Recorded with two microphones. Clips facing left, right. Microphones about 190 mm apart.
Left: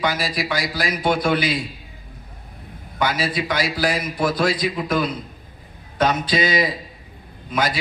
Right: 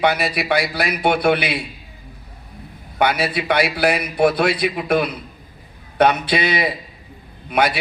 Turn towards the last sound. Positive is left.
turn(degrees=-65)  # may be behind; listen again after turning